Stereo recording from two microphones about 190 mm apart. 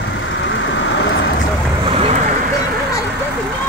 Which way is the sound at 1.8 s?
30° right (ahead or behind).